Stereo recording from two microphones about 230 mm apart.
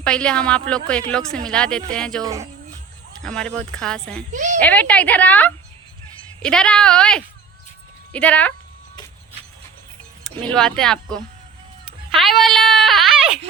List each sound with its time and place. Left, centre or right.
0.0 s a woman's voice: centre
3.2 s a woman's voice: centre
4.3 s a woman's voice: right
4.6 s a woman's voice: centre
10.2 s a woman's voice: centre
12.1 s a sound: centre